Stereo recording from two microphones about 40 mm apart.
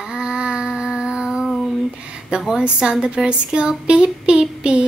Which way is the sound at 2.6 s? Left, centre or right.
Right.